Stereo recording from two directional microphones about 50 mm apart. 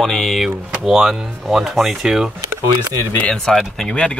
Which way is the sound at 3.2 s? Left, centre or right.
Centre.